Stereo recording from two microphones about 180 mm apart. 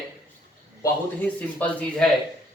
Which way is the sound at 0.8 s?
10° left (ahead or behind).